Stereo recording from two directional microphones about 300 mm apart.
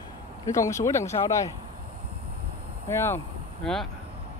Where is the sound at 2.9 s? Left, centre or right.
Centre.